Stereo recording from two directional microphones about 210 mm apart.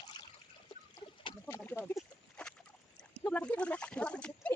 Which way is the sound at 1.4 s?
10° left (ahead or behind).